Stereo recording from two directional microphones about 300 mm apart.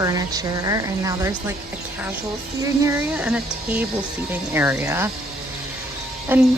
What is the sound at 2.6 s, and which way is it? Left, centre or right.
A woman's voice, centre.